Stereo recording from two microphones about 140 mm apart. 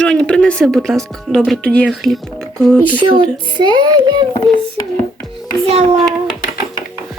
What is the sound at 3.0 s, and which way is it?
Speech, 35° right (ahead or behind).